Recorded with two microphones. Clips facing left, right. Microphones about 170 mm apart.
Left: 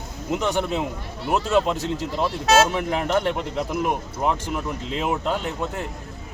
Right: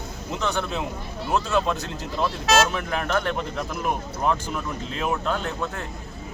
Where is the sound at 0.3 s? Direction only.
15° left (ahead or behind).